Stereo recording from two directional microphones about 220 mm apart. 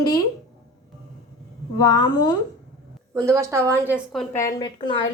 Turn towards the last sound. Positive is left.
turn(degrees=20)  # may be behind; listen again after turning